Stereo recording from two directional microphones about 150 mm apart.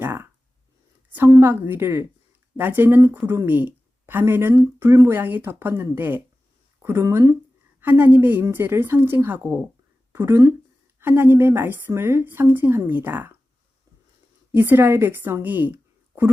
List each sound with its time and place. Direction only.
0.0 s a sound: 15° right (ahead or behind)
1.1 s a woman's voice: 15° right (ahead or behind)
14.5 s speech: 15° right (ahead or behind)